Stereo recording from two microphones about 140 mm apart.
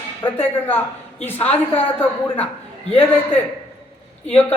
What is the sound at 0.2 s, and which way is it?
Speech, 35° left (ahead or behind).